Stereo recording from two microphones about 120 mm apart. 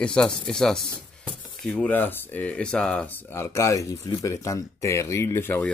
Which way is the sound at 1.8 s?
15° left (ahead or behind).